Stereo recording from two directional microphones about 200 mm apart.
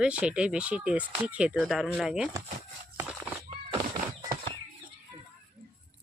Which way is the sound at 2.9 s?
10° right (ahead or behind).